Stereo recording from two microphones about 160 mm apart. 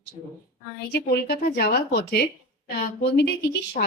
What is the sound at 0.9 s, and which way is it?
A woman's voice, 80° left.